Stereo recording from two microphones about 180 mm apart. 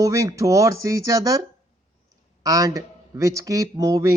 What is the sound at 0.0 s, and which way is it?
Speech, 20° right (ahead or behind).